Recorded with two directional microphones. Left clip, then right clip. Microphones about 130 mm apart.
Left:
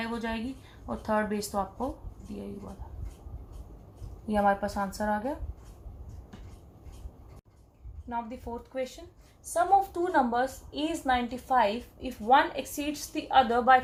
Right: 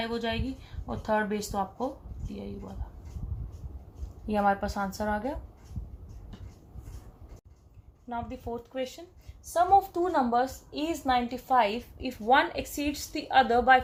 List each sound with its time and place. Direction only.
0.1 s speech: 35° right (ahead or behind)
4.3 s a woman's voice: 45° right (ahead or behind)
8.1 s a woman's voice: 50° right (ahead or behind)
9.5 s a woman's voice: 60° right (ahead or behind)